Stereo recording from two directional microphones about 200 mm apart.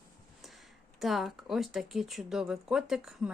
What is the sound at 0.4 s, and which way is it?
Speech, centre (ahead or behind).